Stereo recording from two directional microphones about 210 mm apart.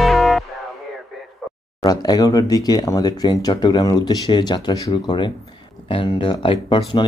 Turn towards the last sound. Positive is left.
turn(degrees=25)  # may be behind; listen again after turning